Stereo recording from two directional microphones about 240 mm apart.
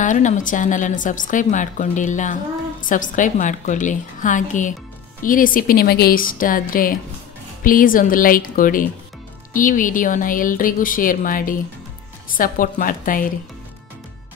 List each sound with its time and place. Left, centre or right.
0.0 s a woman's voice: left